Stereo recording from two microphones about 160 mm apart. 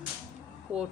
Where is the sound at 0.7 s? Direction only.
5° right (ahead or behind).